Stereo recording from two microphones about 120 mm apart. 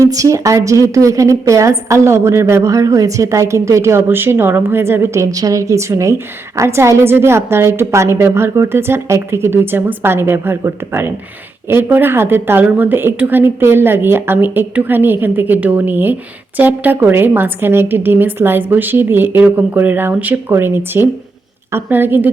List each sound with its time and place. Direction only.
0.0 s a woman's voice: 30° right (ahead or behind)